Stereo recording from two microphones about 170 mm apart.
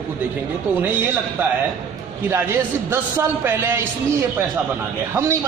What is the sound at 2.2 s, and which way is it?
A man's voice, 15° right (ahead or behind).